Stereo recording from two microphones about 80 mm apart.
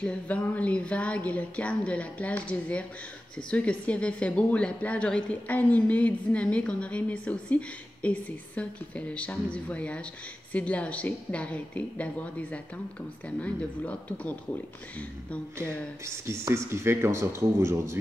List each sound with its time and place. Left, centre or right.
0.0 s speech: centre
16.3 s speech: right